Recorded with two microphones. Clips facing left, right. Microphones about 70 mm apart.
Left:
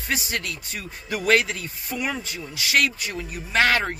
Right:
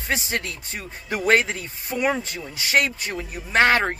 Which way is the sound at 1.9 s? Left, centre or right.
Right.